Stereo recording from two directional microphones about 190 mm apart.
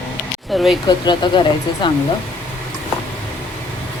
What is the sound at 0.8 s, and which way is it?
Speech, 20° left (ahead or behind).